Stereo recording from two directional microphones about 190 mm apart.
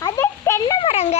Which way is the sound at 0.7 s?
30° left (ahead or behind).